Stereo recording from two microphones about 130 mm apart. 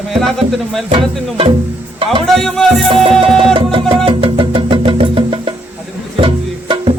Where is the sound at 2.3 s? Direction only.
5° left (ahead or behind).